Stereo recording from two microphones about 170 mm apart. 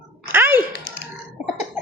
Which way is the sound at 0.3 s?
15° right (ahead or behind).